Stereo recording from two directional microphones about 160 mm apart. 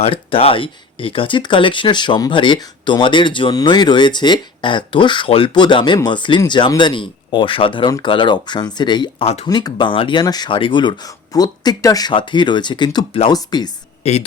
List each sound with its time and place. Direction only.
0.0 s speech: 35° left (ahead or behind)
9.5 s speech: 25° left (ahead or behind)
14.0 s speech: 40° left (ahead or behind)